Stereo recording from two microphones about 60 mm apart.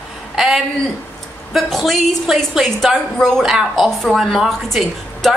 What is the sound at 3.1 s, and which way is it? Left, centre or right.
A woman's voice, centre.